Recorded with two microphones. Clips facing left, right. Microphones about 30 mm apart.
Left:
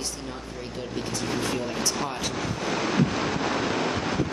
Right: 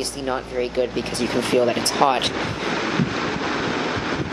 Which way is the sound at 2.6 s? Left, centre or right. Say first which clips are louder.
Right 1 dB; centre.